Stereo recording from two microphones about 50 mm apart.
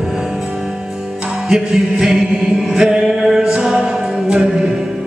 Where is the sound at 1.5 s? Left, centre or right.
Centre.